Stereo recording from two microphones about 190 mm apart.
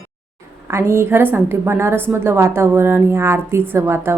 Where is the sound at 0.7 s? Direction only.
15° right (ahead or behind).